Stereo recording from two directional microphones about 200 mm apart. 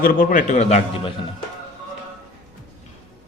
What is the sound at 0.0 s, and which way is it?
A man's voice, 45° left (ahead or behind).